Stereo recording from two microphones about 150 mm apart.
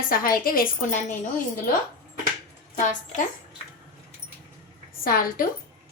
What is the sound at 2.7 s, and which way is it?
Speech, 60° left (ahead or behind).